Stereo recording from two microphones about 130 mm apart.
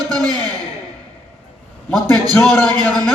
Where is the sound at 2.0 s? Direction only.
5° left (ahead or behind).